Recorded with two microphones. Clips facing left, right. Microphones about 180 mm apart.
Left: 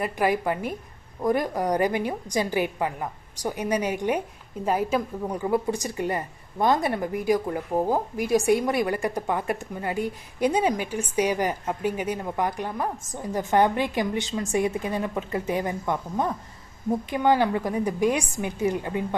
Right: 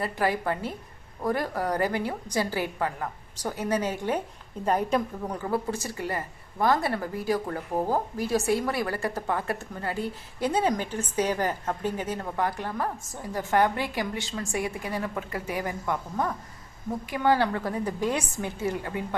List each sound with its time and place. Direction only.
0.0 s a woman's voice: 15° left (ahead or behind)
5.4 s a woman's voice: 15° left (ahead or behind)